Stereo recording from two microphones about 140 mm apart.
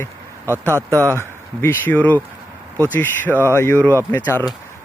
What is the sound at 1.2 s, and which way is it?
Speech, 15° left (ahead or behind).